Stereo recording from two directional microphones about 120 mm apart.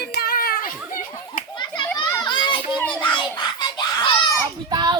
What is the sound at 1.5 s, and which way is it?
Children playing, 40° left (ahead or behind).